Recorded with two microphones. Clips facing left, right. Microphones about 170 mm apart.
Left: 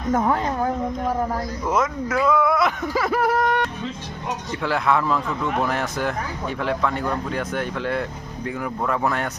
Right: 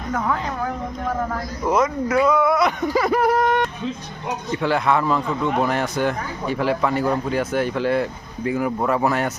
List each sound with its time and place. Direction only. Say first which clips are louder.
0.1 s a woman's voice: left 3 dB; 25° left (ahead or behind)
1.6 s speech: right 4 dB; centre (ahead or behind)